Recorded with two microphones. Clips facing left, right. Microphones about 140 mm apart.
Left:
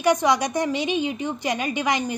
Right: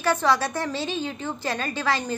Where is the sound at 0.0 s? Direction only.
15° left (ahead or behind).